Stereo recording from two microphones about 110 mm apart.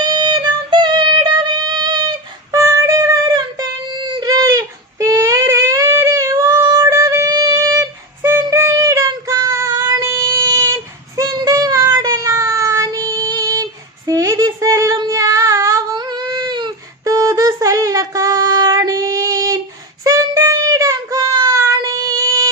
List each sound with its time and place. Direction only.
0.0 s music: 40° right (ahead or behind)
2.5 s a sound: 30° right (ahead or behind)
11.2 s child singing: 30° right (ahead or behind)
14.1 s female singing: 30° right (ahead or behind)
16.0 s child singing: 40° right (ahead or behind)
17.0 s a sound: 30° right (ahead or behind)
20.1 s child singing: 30° right (ahead or behind)